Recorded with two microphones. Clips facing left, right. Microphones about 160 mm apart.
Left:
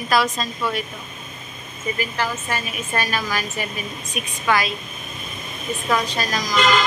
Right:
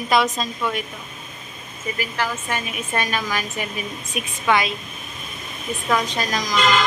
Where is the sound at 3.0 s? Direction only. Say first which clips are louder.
Even; 15° right (ahead or behind).